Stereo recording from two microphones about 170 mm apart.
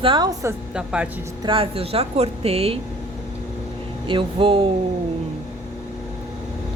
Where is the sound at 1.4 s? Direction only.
30° right (ahead or behind).